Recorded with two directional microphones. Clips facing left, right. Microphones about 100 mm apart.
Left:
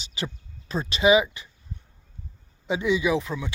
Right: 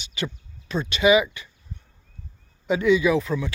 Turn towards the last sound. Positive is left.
turn(degrees=20)  # may be behind; listen again after turning